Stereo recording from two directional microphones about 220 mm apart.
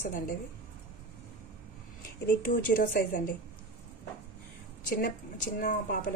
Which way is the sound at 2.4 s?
40° left (ahead or behind).